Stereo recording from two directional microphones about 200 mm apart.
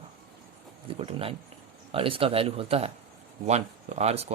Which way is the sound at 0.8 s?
25° right (ahead or behind).